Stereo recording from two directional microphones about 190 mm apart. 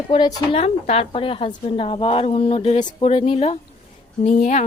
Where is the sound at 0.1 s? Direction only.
25° left (ahead or behind).